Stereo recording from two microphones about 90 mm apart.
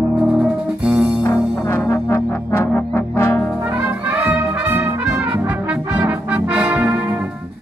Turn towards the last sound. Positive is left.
turn(degrees=-20)  # may be behind; listen again after turning